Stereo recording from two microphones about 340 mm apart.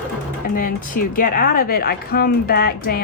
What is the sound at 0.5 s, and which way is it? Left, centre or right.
A woman's voice, left.